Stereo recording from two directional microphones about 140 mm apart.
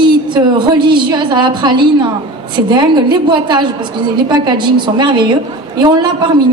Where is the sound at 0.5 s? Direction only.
35° right (ahead or behind).